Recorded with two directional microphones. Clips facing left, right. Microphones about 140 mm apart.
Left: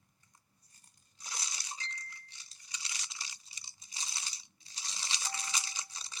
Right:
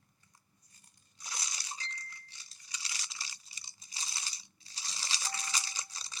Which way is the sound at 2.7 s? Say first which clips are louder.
Right 1 dB; 20° left (ahead or behind).